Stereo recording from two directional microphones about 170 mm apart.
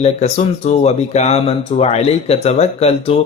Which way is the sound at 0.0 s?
40° left (ahead or behind).